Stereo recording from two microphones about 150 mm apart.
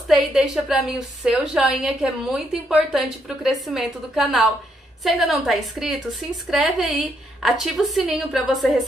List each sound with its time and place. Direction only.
0.1 s a woman's voice: 5° right (ahead or behind)